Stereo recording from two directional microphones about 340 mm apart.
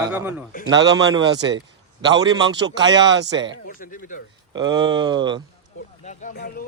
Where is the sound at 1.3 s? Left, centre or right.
Right.